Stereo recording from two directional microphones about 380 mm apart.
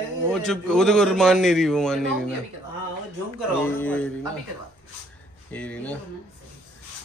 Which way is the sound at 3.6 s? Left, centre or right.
Centre.